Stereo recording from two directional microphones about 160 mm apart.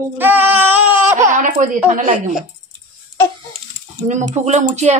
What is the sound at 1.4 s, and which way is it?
Speech, 55° right (ahead or behind).